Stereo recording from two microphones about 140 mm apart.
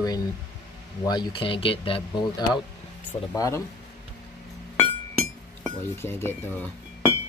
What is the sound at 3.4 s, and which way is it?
Speech, 20° left (ahead or behind).